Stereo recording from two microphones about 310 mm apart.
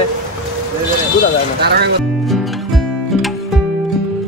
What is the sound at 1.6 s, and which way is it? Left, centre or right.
Speech, right.